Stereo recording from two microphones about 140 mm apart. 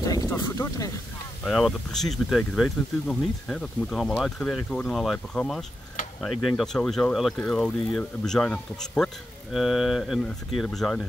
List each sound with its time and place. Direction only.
0.0 s speech: 25° left (ahead or behind)
1.4 s speech: 5° left (ahead or behind)